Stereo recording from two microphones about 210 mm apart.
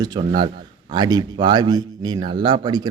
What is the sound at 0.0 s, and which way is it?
Speech, 20° right (ahead or behind).